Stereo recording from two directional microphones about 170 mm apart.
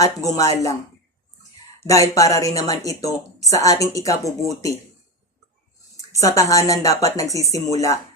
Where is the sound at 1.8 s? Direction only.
20° left (ahead or behind).